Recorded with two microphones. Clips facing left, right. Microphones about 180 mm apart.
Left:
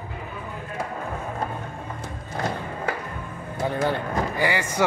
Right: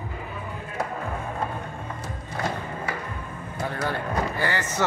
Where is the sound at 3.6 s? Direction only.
20° left (ahead or behind).